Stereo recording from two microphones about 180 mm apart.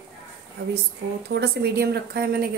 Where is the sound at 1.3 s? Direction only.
65° right (ahead or behind).